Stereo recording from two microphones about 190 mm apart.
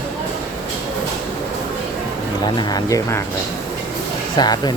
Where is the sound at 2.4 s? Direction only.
20° left (ahead or behind).